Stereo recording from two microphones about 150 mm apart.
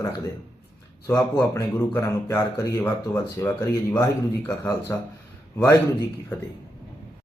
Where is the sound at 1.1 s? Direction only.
20° left (ahead or behind).